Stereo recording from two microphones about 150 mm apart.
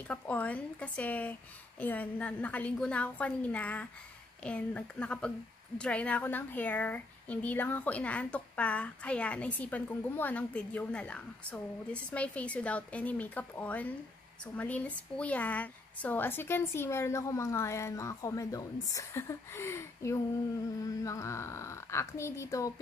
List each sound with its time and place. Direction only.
0.1 s speech: 10° left (ahead or behind)